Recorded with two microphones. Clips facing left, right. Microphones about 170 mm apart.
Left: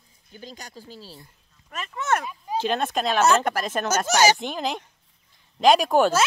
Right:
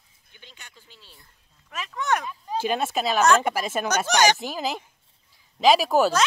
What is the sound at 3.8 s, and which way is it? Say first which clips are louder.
Speech: left 1 dB; 5° left (ahead or behind).